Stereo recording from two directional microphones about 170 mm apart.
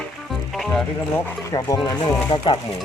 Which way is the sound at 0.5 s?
5° left (ahead or behind).